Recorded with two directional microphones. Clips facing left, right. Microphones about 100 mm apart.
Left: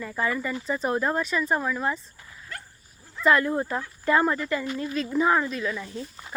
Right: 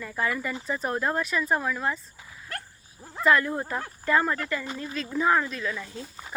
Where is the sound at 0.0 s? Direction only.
Centre (ahead or behind).